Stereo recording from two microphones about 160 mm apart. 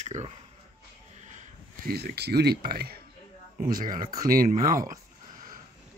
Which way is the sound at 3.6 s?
60° right (ahead or behind).